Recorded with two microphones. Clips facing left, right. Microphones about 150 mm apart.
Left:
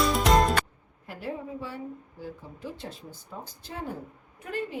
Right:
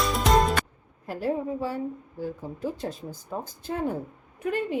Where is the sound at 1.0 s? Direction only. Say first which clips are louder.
Right 8 dB; 40° right (ahead or behind).